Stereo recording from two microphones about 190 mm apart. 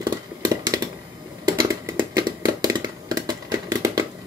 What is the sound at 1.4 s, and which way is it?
Computer keyboard, 20° right (ahead or behind).